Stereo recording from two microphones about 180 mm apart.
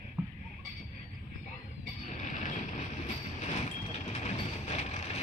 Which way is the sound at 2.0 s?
40° left (ahead or behind).